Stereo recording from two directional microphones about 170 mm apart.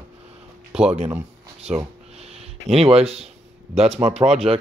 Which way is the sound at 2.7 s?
35° right (ahead or behind).